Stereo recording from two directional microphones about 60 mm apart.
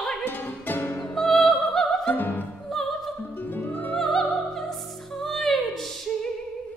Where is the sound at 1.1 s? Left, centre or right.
Centre.